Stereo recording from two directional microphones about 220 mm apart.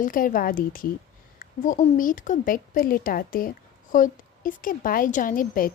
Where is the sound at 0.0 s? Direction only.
40° left (ahead or behind).